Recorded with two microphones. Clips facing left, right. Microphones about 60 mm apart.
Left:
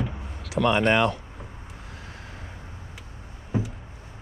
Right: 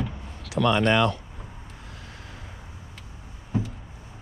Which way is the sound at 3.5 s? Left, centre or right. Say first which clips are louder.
Even; centre.